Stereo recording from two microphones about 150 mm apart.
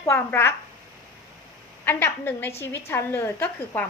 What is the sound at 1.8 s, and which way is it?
A woman's voice, 15° left (ahead or behind).